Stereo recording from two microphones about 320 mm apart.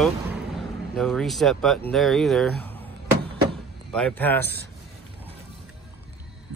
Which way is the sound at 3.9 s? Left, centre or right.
Centre.